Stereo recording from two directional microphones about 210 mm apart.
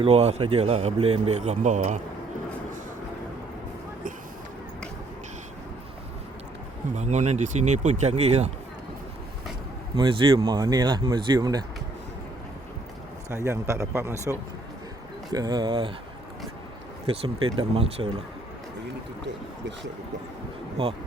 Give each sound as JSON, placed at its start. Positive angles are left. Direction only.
{"t": 0.0, "sound": "speech", "side_deg": -30}
{"t": 6.9, "sound": "speech", "side_deg": -35}
{"t": 9.9, "sound": "speech", "side_deg": -25}
{"t": 13.3, "sound": "a man's voice", "side_deg": -15}
{"t": 17.2, "sound": "speech", "side_deg": -25}
{"t": 19.2, "sound": "speech", "side_deg": -55}